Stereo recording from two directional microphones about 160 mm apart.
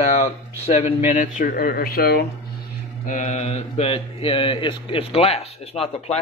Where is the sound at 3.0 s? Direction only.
50° left (ahead or behind).